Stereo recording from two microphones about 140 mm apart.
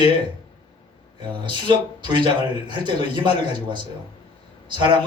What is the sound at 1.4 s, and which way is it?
Speech, 35° right (ahead or behind).